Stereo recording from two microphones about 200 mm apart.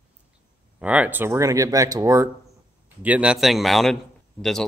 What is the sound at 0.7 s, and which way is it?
A man's voice, 5° right (ahead or behind).